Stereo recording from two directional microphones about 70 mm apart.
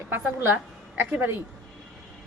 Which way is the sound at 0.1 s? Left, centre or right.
Right.